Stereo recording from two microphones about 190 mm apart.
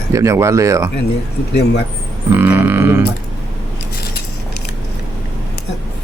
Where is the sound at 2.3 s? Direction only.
10° right (ahead or behind).